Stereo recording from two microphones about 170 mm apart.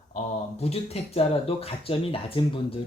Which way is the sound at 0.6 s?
35° left (ahead or behind).